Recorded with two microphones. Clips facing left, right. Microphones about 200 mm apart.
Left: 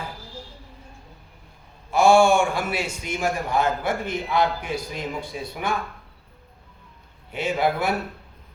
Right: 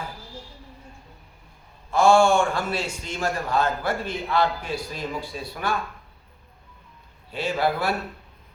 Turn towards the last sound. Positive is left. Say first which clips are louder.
# left 1 dB
turn(degrees=20)  # may be behind; listen again after turning